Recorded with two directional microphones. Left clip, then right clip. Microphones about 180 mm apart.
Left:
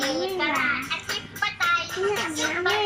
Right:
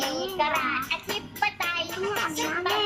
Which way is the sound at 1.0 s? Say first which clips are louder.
Even; 20° right (ahead or behind).